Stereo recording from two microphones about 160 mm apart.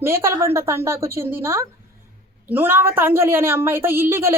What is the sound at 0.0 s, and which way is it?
A woman's voice, 15° right (ahead or behind).